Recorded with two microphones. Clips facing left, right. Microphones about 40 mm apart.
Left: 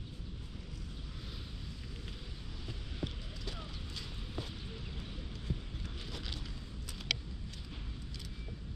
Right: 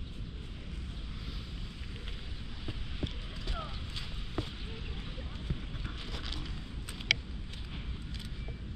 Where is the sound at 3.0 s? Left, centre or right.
Right.